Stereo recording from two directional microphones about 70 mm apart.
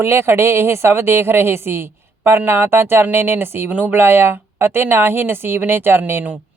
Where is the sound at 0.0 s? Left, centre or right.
Right.